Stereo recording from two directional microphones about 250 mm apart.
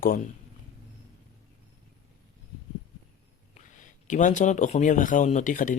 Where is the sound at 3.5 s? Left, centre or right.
Left.